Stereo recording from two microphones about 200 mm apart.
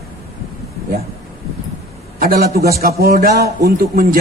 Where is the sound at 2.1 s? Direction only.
45° right (ahead or behind).